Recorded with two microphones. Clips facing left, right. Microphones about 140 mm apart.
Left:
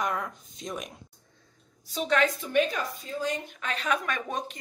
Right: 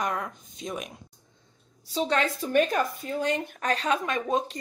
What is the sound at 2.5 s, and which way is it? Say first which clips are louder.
Speech: right 3 dB; 50° right (ahead or behind).